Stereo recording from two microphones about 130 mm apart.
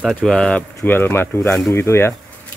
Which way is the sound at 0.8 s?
15° left (ahead or behind).